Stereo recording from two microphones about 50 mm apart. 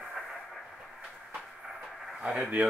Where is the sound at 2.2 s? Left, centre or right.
Centre.